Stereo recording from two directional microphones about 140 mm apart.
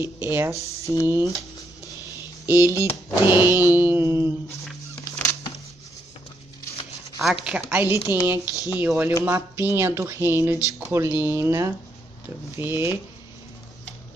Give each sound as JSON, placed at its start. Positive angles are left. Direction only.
{"t": 0.0, "sound": "speech", "side_deg": -15}
{"t": 0.6, "sound": "speech", "side_deg": 45}
{"t": 1.0, "sound": "speech", "side_deg": -20}
{"t": 2.4, "sound": "computer keyboard", "side_deg": -15}
{"t": 2.8, "sound": "speech", "side_deg": -15}
{"t": 5.1, "sound": "music", "side_deg": 20}
{"t": 7.4, "sound": "speech", "side_deg": -10}